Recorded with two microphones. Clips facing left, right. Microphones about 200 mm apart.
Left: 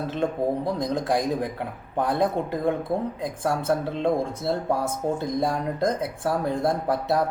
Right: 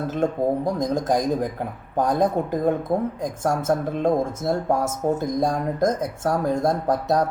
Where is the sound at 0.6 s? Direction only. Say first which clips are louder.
Right 3 dB; 15° right (ahead or behind).